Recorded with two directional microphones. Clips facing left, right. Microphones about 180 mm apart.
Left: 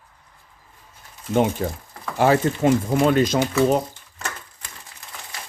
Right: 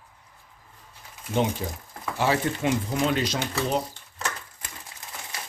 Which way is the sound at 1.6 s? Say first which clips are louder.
Left 5 dB; 55° left (ahead or behind).